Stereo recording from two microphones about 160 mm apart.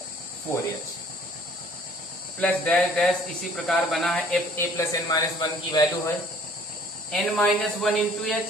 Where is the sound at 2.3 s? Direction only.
5° left (ahead or behind).